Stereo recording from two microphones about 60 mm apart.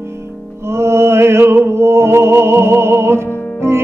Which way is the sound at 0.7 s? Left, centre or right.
Right.